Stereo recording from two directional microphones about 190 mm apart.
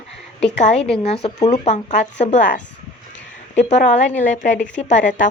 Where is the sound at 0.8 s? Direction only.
5° left (ahead or behind).